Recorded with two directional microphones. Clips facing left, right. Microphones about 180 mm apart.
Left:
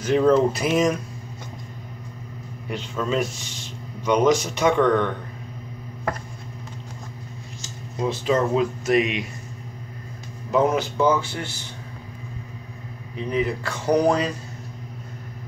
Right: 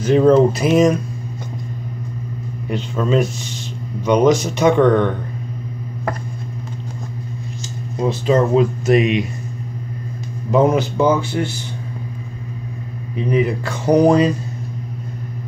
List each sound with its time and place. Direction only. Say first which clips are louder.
0.0 s speech: right 6 dB; 30° right (ahead or behind)
2.7 s speech: right 7 dB; 25° right (ahead or behind)
8.0 s speech: right 5 dB; 35° right (ahead or behind)
10.5 s speech: right 5 dB; 20° right (ahead or behind)
13.3 s speech: right 6 dB; 15° right (ahead or behind)